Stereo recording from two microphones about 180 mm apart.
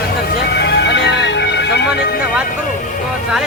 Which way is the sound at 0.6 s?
70° left (ahead or behind).